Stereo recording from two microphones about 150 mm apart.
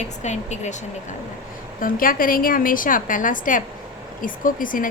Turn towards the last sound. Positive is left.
turn(degrees=65)  # may be behind; listen again after turning